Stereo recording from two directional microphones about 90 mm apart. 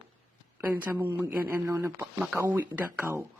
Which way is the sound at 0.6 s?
20° right (ahead or behind).